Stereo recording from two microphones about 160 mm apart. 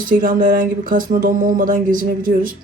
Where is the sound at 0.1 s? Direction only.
60° right (ahead or behind).